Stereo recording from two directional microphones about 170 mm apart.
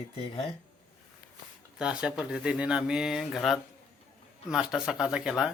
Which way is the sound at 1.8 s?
5° right (ahead or behind).